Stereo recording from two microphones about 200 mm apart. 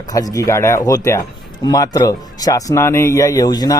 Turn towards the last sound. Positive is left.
turn(degrees=20)  # may be behind; listen again after turning